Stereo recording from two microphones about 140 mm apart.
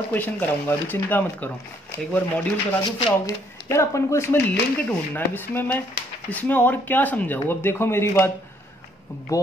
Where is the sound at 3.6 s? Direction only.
20° left (ahead or behind).